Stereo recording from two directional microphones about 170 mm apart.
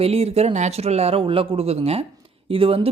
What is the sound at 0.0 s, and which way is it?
Speech, 35° right (ahead or behind).